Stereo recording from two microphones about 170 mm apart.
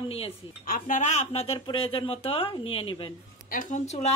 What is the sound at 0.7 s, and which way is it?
Speech, 55° left (ahead or behind).